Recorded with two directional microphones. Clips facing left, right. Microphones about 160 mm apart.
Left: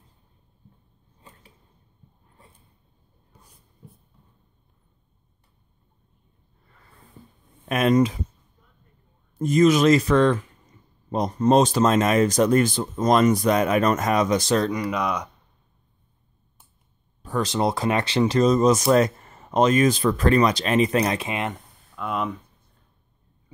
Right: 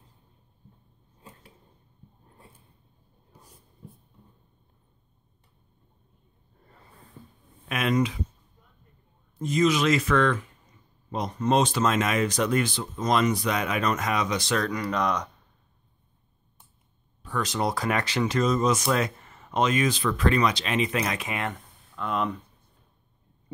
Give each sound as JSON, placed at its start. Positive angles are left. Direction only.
{"t": 7.6, "sound": "speech", "side_deg": 40}
{"t": 9.4, "sound": "speech", "side_deg": 50}
{"t": 14.6, "sound": "speech", "side_deg": 20}
{"t": 14.9, "sound": "speech", "side_deg": 5}
{"t": 17.2, "sound": "speech", "side_deg": 35}
{"t": 21.9, "sound": "speech", "side_deg": 5}